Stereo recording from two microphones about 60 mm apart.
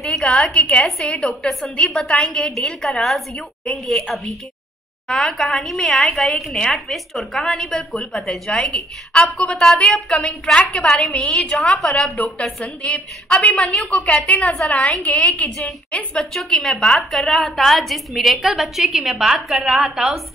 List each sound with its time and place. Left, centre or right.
0.0 s a woman's voice: centre
12.8 s a woman's voice: centre
13.7 s a woman's voice: centre
16.3 s a woman's voice: centre